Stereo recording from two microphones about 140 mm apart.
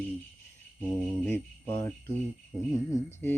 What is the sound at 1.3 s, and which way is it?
Jingle bell, 15° left (ahead or behind).